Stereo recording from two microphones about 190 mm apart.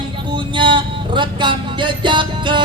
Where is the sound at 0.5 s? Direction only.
25° right (ahead or behind).